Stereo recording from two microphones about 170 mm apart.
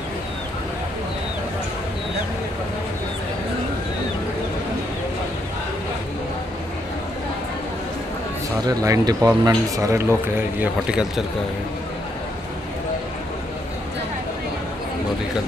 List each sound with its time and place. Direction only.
8.6 s speech: 20° right (ahead or behind); by 11.2 s 5° right (ahead or behind)